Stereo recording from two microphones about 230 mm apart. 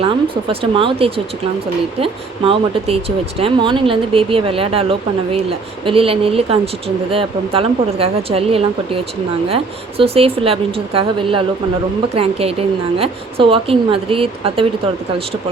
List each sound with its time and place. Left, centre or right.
0.0 s speech: right
10.0 s speech: right